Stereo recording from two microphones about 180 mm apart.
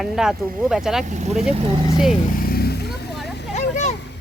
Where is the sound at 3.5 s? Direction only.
40° left (ahead or behind).